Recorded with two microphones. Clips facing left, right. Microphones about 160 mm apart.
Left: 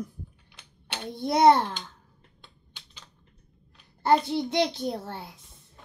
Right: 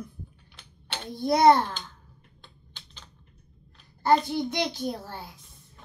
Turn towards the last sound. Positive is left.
turn(degrees=25)  # may be behind; listen again after turning